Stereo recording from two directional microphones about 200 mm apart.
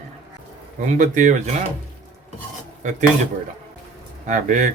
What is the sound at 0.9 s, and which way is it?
Speech, 40° right (ahead or behind).